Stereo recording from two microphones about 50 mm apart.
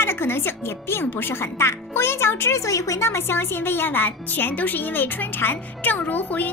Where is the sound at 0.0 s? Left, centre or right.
Left.